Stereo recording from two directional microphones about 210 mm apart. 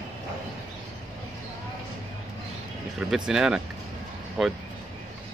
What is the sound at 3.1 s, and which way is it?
Speech, 5° right (ahead or behind).